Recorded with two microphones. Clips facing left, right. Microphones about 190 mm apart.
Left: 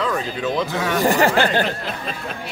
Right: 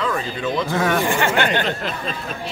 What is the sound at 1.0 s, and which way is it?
Speech, 40° left (ahead or behind).